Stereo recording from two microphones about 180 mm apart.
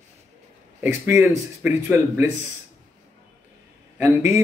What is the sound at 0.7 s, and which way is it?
Speech, 15° right (ahead or behind).